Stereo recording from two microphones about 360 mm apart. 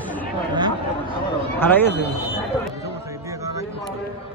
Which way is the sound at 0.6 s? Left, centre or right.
Centre.